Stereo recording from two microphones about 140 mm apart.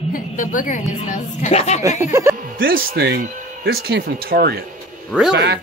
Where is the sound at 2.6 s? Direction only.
90° right.